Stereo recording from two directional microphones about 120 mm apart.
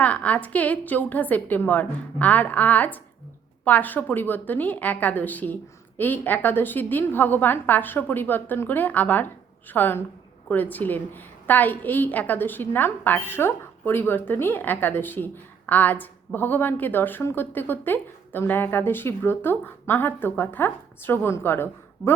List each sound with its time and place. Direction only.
0.0 s a woman's voice: 10° left (ahead or behind)